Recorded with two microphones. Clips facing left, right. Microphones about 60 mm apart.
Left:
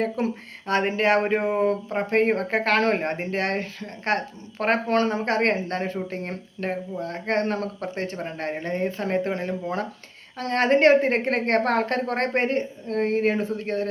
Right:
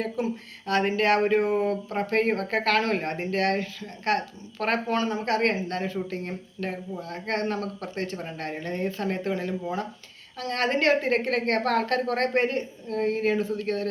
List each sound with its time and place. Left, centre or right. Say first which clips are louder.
0.2 s speech: left 2 dB; left
0.7 s speech: left 2 dB; left
4.9 s a woman's voice: left 3 dB; left